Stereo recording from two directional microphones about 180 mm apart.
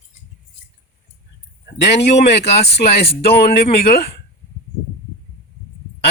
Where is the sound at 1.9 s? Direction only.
70° left (ahead or behind).